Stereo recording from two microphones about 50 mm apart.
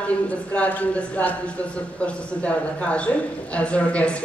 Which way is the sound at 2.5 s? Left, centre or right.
Left.